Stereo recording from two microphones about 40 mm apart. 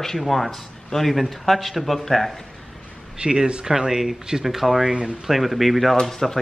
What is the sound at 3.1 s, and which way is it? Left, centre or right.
A man's voice, right.